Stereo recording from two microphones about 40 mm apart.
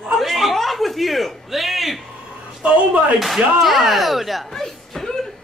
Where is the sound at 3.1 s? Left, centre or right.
Centre.